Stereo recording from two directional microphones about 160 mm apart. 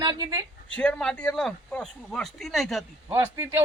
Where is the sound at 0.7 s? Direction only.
5° left (ahead or behind).